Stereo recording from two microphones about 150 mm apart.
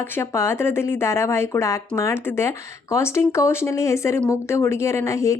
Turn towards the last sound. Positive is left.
turn(degrees=20)  # may be behind; listen again after turning